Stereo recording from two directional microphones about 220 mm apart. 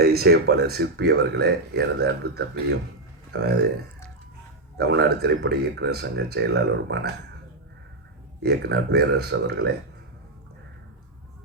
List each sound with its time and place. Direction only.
0.0 s speech: 45° right (ahead or behind)
4.8 s speech: 50° right (ahead or behind)
8.4 s speech: 50° right (ahead or behind)